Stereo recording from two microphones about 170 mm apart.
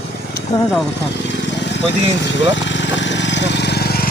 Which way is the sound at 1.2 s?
90° left.